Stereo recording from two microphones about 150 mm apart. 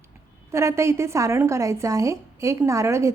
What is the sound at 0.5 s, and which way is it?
A woman's voice, 20° right (ahead or behind).